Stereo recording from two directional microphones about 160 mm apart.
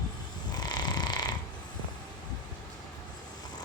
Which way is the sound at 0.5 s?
25° left (ahead or behind).